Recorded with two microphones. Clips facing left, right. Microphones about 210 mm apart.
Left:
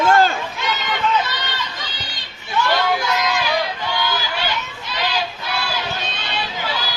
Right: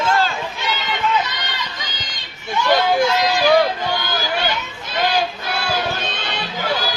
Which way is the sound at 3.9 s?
45° right (ahead or behind).